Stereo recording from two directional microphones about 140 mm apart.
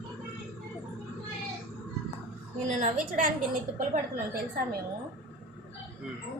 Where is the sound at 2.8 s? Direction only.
75° right (ahead or behind).